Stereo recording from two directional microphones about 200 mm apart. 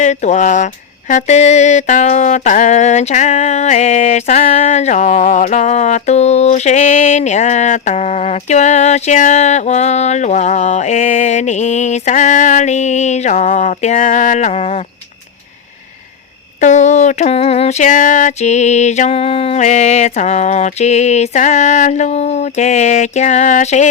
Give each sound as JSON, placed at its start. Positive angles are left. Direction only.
{"t": 0.0, "sound": "speech", "side_deg": 35}
{"t": 16.6, "sound": "speech", "side_deg": 35}